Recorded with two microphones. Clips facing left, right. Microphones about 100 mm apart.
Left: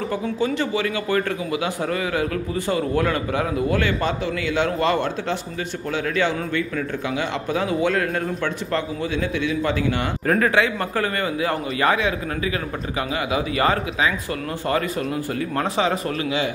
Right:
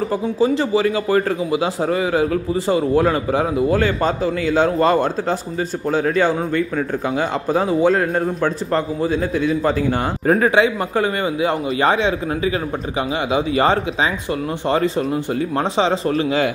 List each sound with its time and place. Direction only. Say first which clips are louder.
0.4 s a man's voice: right 7 dB; 30° right (ahead or behind)
3.8 s a man's voice: right 4 dB; 40° right (ahead or behind)
10.4 s a man's voice: right 4 dB; 20° right (ahead or behind)
13.3 s a man's voice: right 4 dB; 30° right (ahead or behind)